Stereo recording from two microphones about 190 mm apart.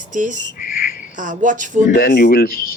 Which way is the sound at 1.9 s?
45° left (ahead or behind).